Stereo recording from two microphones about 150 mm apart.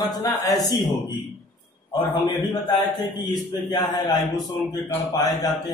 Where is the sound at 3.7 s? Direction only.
25° left (ahead or behind).